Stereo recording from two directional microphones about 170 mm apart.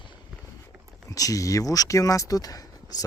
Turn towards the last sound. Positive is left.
turn(degrees=20)  # may be behind; listen again after turning